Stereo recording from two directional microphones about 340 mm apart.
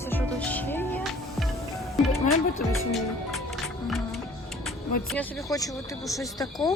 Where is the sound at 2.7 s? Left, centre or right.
Centre.